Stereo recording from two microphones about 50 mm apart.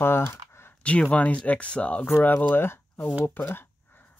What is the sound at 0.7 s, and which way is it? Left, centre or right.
Speech, left.